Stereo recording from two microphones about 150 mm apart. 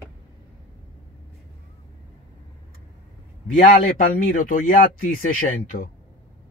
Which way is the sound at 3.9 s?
60° left (ahead or behind).